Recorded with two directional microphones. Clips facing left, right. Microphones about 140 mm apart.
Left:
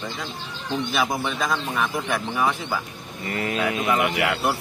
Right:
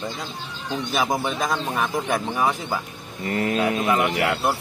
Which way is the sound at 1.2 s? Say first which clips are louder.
Right 1 dB; 40° right (ahead or behind).